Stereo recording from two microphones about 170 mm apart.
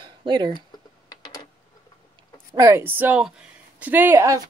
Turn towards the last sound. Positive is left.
turn(degrees=-15)  # may be behind; listen again after turning